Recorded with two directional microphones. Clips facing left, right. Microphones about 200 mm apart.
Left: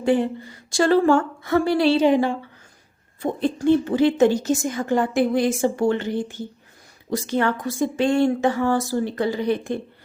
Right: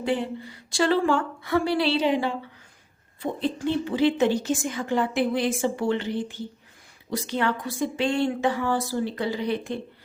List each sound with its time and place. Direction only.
0.0 s speech: 50° left (ahead or behind)